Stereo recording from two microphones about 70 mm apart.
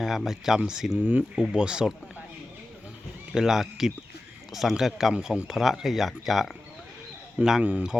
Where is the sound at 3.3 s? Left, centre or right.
Centre.